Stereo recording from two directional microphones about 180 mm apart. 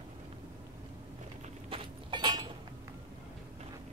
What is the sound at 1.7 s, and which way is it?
Keys jangling, 25° right (ahead or behind).